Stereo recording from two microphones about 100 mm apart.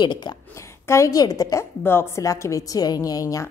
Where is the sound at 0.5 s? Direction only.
30° left (ahead or behind).